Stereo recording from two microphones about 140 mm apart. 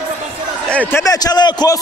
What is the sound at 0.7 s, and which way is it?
A man's voice, 15° left (ahead or behind).